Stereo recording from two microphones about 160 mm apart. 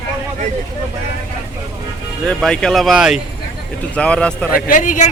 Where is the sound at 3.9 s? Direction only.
5° left (ahead or behind).